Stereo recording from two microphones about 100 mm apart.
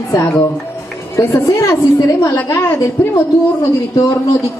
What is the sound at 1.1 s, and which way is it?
A woman's voice, 30° left (ahead or behind).